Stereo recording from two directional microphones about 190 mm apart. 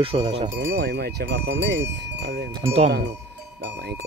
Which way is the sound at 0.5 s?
60° right (ahead or behind).